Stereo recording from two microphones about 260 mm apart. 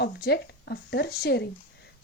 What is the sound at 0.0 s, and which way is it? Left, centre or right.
A woman's voice, left.